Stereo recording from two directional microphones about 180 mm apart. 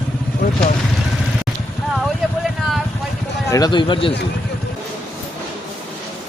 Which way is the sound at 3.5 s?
25° left (ahead or behind).